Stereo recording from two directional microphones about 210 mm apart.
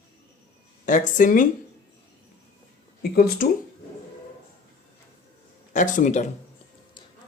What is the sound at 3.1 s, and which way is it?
Speech, 45° left (ahead or behind).